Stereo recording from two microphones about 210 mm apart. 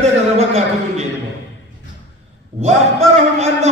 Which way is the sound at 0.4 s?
30° right (ahead or behind).